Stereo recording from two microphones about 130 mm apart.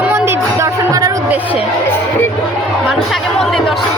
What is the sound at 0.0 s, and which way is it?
Music, 20° right (ahead or behind).